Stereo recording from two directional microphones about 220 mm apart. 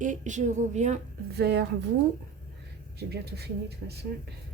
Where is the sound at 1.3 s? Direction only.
50° right (ahead or behind).